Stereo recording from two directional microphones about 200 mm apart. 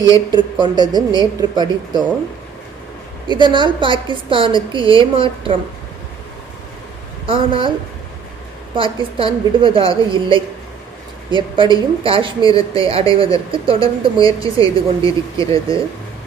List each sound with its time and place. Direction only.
0.6 s a woman's voice: 20° right (ahead or behind)
3.2 s a woman's voice: 25° right (ahead or behind)
7.3 s a woman's voice: 25° right (ahead or behind)
8.7 s a woman's voice: 25° right (ahead or behind)